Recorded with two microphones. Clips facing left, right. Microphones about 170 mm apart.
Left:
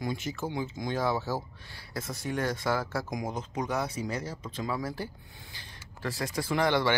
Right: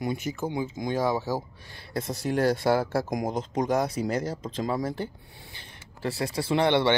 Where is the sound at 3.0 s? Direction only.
45° right (ahead or behind).